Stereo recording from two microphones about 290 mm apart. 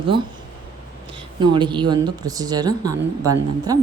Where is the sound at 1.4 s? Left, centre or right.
Centre.